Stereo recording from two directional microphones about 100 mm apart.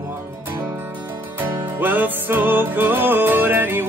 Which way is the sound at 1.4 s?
20° right (ahead or behind).